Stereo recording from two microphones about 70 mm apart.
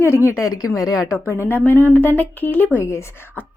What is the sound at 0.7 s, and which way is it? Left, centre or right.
Speech, left.